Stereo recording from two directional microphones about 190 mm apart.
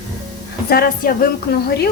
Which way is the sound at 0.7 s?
50° left (ahead or behind).